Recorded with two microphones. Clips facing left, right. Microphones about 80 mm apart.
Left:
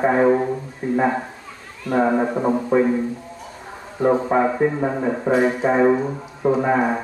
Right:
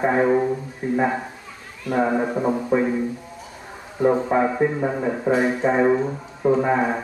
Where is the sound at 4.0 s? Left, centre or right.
Centre.